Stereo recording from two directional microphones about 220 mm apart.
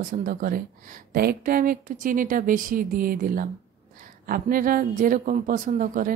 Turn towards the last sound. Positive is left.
turn(degrees=-40)  # may be behind; listen again after turning